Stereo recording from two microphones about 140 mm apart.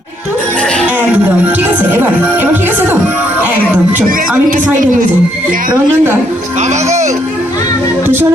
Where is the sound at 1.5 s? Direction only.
15° right (ahead or behind).